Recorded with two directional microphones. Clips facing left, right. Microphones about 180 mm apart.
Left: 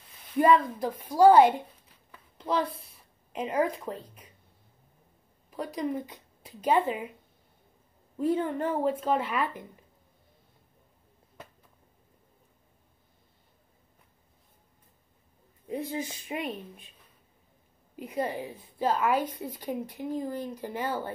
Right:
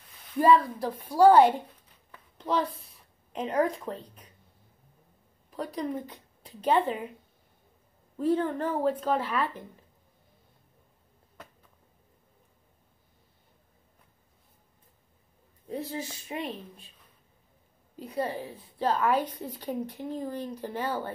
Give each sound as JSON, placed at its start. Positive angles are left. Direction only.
{"t": 0.4, "sound": "a woman's voice", "side_deg": 15}
{"t": 2.0, "sound": "a sound", "side_deg": 5}
{"t": 3.3, "sound": "a woman's voice", "side_deg": 5}
{"t": 5.5, "sound": "speech", "side_deg": 10}
{"t": 8.2, "sound": "a woman's voice", "side_deg": 10}
{"t": 15.9, "sound": "a woman's voice", "side_deg": 15}
{"t": 17.9, "sound": "a woman's voice", "side_deg": 15}